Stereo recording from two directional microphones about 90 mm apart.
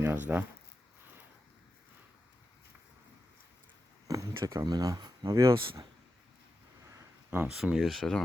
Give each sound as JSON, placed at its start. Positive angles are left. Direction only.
{"t": 0.0, "sound": "speech", "side_deg": -20}
{"t": 4.1, "sound": "speech", "side_deg": -40}
{"t": 7.4, "sound": "speech", "side_deg": -5}